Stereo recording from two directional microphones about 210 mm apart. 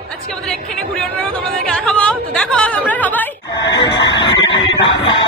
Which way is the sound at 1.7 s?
5° left (ahead or behind).